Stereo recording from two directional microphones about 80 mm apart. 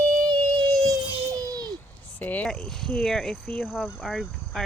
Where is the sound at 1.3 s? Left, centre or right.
Right.